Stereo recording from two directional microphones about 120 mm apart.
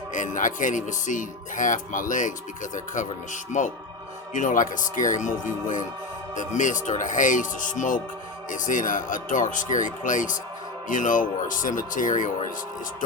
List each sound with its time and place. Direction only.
0.1 s speech: 90° left